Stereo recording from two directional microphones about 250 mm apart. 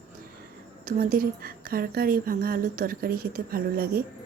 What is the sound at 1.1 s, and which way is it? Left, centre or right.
Speech, right.